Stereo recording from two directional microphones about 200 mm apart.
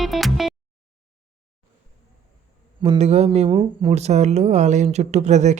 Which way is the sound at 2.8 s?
30° right (ahead or behind).